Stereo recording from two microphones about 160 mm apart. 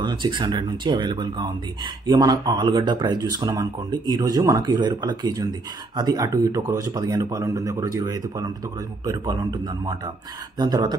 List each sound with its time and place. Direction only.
0.0 s speech: 30° right (ahead or behind)